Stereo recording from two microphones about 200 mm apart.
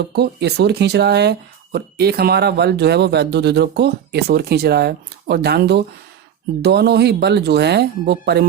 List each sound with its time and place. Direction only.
0.2 s speech: 55° right (ahead or behind)